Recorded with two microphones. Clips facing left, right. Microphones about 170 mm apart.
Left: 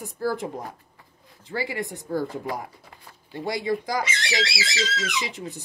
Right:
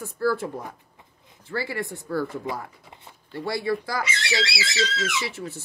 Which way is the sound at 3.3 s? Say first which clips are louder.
Even; 15° left (ahead or behind).